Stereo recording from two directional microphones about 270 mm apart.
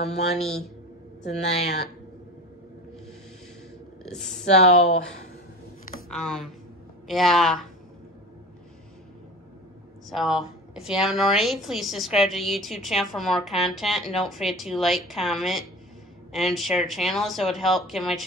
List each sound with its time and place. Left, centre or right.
0.0 s speech: left
4.5 s speech: left
6.0 s a woman's voice: centre
10.0 s a woman's voice: centre